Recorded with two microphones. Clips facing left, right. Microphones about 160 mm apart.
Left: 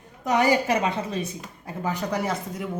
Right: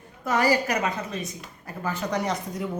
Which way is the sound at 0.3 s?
20° left (ahead or behind).